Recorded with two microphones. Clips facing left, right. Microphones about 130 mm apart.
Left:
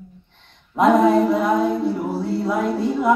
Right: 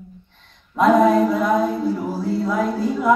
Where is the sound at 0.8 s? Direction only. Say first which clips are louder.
Even; 25° left (ahead or behind).